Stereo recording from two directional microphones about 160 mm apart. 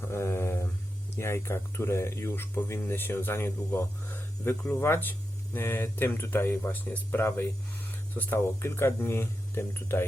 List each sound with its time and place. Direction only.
0.1 s mantra: 15° left (ahead or behind)
1.1 s speech: 15° left (ahead or behind)